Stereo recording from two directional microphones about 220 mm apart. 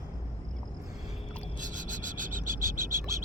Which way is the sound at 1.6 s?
35° right (ahead or behind).